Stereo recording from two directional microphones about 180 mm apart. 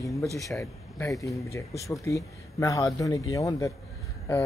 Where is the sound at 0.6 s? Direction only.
15° left (ahead or behind).